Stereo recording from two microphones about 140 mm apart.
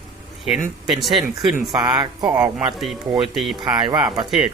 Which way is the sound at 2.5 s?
Centre (ahead or behind).